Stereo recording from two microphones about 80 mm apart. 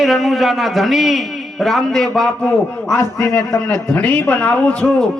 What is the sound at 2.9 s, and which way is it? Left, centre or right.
Speech, left.